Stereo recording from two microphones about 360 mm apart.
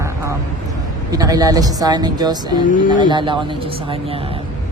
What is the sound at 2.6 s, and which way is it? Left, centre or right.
Speech, left.